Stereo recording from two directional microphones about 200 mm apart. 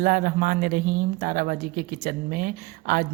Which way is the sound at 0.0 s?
45° right (ahead or behind).